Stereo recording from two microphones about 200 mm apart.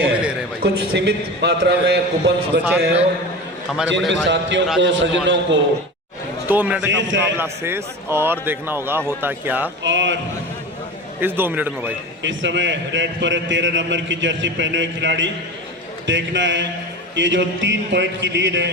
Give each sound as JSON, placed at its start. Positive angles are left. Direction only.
{"t": 0.0, "sound": "neigh", "side_deg": -5}
{"t": 0.6, "sound": "a man's voice", "side_deg": -55}
{"t": 4.1, "sound": "a man's voice", "side_deg": -65}
{"t": 6.5, "sound": "a man's voice", "side_deg": -10}
{"t": 6.8, "sound": "a man's voice", "side_deg": -65}
{"t": 7.3, "sound": "a man's voice", "side_deg": -10}
{"t": 9.8, "sound": "a man's voice", "side_deg": -65}
{"t": 11.2, "sound": "a man's voice", "side_deg": -10}
{"t": 12.2, "sound": "a man's voice", "side_deg": -65}